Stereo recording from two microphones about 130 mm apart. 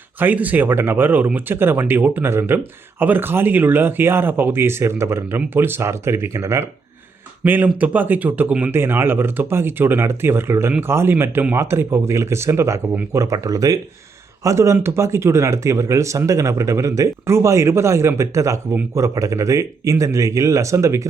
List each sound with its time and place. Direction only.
0.2 s speech: 10° right (ahead or behind)